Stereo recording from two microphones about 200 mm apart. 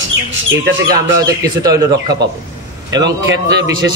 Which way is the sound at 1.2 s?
20° right (ahead or behind).